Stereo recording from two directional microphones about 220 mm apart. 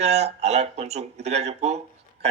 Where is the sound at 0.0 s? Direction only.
30° right (ahead or behind).